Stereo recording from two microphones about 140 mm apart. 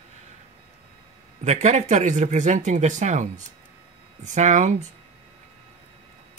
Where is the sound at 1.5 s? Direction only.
55° right (ahead or behind).